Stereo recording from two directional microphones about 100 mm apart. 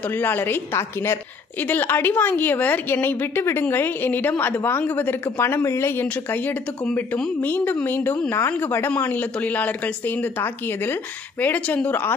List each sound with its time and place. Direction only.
0.1 s a woman's voice: 20° left (ahead or behind)